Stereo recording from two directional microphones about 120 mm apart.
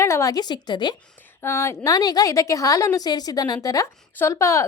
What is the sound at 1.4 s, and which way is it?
A woman's voice, 20° left (ahead or behind).